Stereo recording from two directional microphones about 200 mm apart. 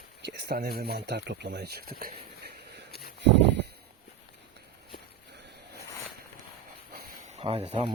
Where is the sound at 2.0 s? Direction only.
55° right (ahead or behind).